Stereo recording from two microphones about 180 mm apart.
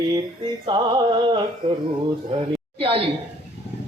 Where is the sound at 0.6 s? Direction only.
25° right (ahead or behind).